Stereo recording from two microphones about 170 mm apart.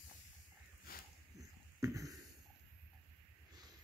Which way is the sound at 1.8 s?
20° right (ahead or behind).